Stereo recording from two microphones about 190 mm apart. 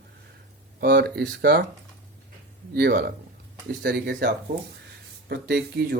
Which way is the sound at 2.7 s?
55° right (ahead or behind).